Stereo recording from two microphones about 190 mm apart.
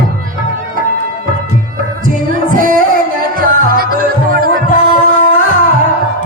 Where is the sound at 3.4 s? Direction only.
50° right (ahead or behind).